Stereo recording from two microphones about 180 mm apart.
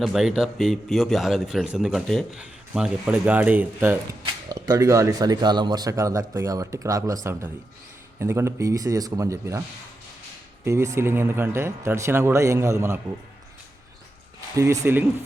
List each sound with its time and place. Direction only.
0.0 s a man's voice: centre (ahead or behind)
4.2 s speech: 20° right (ahead or behind)
8.2 s speech: 15° right (ahead or behind)
14.5 s speech: 15° right (ahead or behind)